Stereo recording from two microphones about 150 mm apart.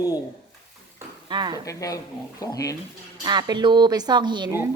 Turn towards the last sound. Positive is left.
turn(degrees=-30)  # may be behind; listen again after turning